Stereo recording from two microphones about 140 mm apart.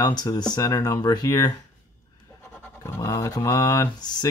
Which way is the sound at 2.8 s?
20° left (ahead or behind).